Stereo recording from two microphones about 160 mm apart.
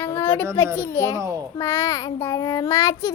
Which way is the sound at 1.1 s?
20° right (ahead or behind).